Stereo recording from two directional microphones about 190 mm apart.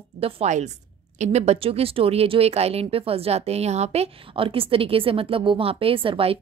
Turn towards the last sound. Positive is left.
turn(degrees=-30)  # may be behind; listen again after turning